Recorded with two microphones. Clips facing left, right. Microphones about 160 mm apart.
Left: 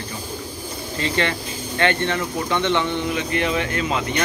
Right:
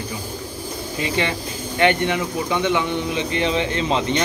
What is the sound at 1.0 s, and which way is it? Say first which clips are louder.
Speech: even; 15° right (ahead or behind).